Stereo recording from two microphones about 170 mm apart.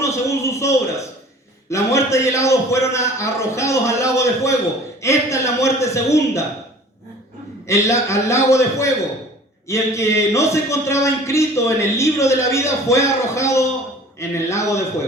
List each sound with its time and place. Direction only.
0.0 s a sound: 15° left (ahead or behind)
1.7 s a man's voice: 15° left (ahead or behind)
7.7 s a man's voice: 15° left (ahead or behind)